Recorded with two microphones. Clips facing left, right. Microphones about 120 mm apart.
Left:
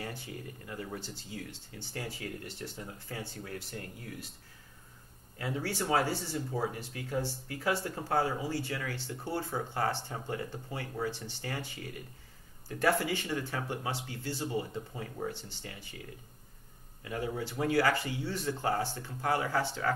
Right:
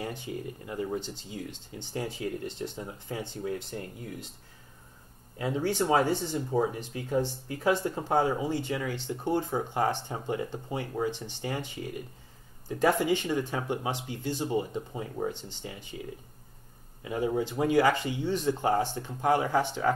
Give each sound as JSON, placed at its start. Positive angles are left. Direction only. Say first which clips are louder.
{"t": 0.0, "sound": "speech", "louder": "right 6 dB", "side_deg": -20}
{"t": 5.4, "sound": "speech", "louder": "right 6 dB", "side_deg": -20}
{"t": 17.0, "sound": "speech", "louder": "right 7 dB", "side_deg": -20}